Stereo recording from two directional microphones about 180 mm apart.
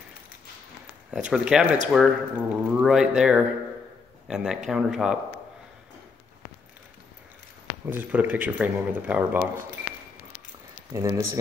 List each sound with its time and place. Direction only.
1.1 s speech: 5° right (ahead or behind)
7.8 s speech: 10° right (ahead or behind)
10.9 s speech: 15° right (ahead or behind)